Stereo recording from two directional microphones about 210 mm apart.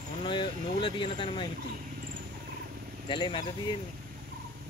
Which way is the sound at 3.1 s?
20° left (ahead or behind).